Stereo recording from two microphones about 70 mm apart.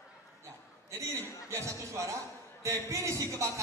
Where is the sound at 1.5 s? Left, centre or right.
Right.